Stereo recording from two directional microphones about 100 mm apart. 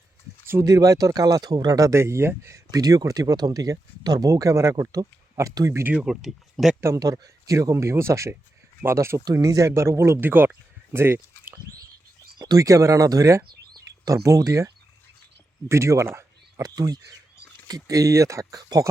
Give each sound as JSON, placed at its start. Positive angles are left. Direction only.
{"t": 0.6, "sound": "speech", "side_deg": -35}
{"t": 2.7, "sound": "speech", "side_deg": -35}
{"t": 5.9, "sound": "speech", "side_deg": -10}
{"t": 6.8, "sound": "speech", "side_deg": -35}
{"t": 12.4, "sound": "speech", "side_deg": -40}
{"t": 15.7, "sound": "speech", "side_deg": -30}
{"t": 16.6, "sound": "speech", "side_deg": -40}